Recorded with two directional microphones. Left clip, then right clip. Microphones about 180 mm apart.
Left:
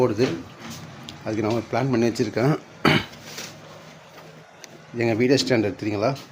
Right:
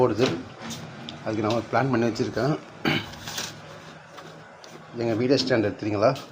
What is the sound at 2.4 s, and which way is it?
Speech, 60° left (ahead or behind).